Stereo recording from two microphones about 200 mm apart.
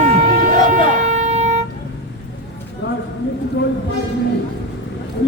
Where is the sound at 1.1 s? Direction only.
35° right (ahead or behind).